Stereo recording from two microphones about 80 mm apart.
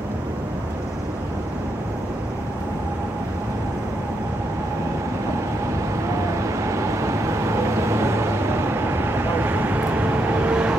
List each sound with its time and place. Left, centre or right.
6.0 s vehicle: right; by 10.8 s centre